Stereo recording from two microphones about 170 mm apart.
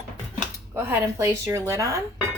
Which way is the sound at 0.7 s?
15° right (ahead or behind).